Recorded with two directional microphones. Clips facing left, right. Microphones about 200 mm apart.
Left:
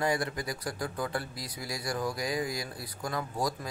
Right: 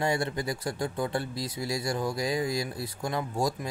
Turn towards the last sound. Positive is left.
turn(degrees=-25)  # may be behind; listen again after turning